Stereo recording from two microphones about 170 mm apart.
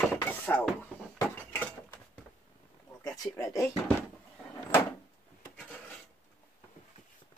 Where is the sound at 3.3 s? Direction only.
15° left (ahead or behind).